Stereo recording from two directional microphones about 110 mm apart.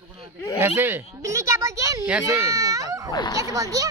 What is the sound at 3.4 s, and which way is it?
Speech, 30° right (ahead or behind).